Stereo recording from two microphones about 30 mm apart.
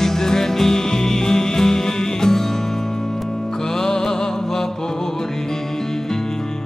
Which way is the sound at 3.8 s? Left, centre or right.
Centre.